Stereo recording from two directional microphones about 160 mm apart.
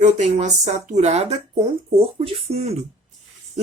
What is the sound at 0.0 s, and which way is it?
Speech, 45° right (ahead or behind).